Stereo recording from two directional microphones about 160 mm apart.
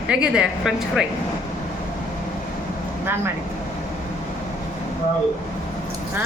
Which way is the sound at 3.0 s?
15° right (ahead or behind).